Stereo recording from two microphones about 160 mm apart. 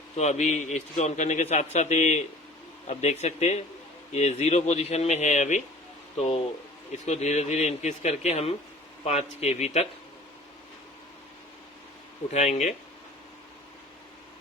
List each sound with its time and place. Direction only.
0.2 s a man's voice: 45° left (ahead or behind)
12.3 s a man's voice: 45° left (ahead or behind)